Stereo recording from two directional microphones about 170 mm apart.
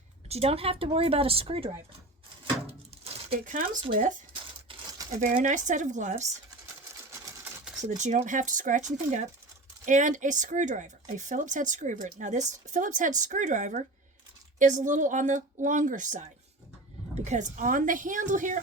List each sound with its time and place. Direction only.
0.3 s a woman's voice: 35° right (ahead or behind)
3.0 s a sound: 35° right (ahead or behind)
3.4 s speech: 50° right (ahead or behind)
4.7 s crumpling: 20° right (ahead or behind)
5.2 s speech: 50° right (ahead or behind)
7.9 s speech: 45° right (ahead or behind)